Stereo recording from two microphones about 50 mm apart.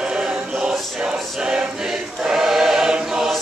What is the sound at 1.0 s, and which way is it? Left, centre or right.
Choir, centre.